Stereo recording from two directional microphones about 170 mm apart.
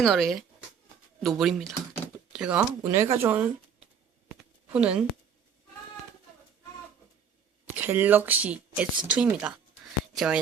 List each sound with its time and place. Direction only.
0.0 s speech: centre (ahead or behind)
2.8 s speech: 15° right (ahead or behind)
4.7 s speech: 5° right (ahead or behind)
7.8 s speech: 10° right (ahead or behind)